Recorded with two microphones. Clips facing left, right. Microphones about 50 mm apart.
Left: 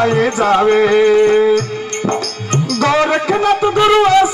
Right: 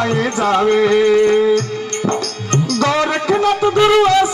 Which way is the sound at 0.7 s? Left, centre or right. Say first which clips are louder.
Left 2 dB; left.